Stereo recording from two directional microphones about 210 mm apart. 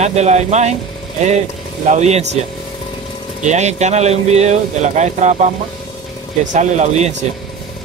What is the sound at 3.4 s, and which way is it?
Speech, 35° right (ahead or behind).